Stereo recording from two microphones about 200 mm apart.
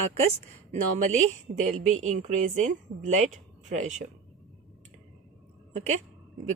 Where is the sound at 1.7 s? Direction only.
35° right (ahead or behind).